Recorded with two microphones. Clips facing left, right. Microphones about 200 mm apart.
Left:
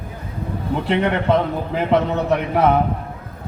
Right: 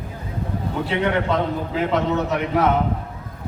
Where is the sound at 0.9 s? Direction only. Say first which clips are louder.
Left 4 dB; 60° left (ahead or behind).